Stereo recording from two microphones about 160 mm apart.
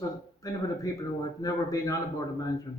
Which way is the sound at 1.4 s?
20° left (ahead or behind).